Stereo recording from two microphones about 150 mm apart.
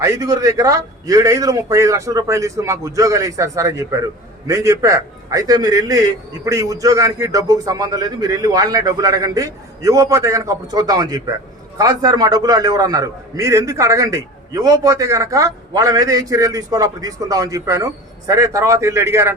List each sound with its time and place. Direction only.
0.0 s a man's voice: 25° right (ahead or behind)